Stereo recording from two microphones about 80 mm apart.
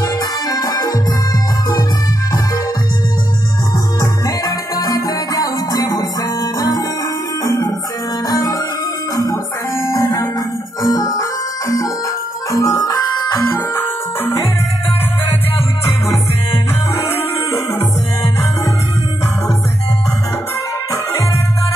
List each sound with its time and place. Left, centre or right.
0.5 s music: left
4.0 s music: left
8.3 s music: left
9.8 s music: left
10.8 s music: left
12.4 s music: left
12.8 s music: left
13.5 s music: left